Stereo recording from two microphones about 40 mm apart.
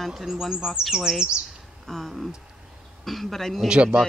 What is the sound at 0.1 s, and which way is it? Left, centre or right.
Speech, centre.